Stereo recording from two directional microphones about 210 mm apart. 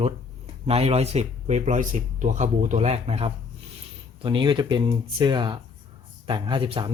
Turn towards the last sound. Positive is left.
turn(degrees=-25)  # may be behind; listen again after turning